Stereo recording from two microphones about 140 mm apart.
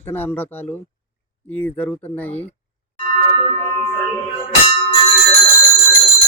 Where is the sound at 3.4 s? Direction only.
40° right (ahead or behind).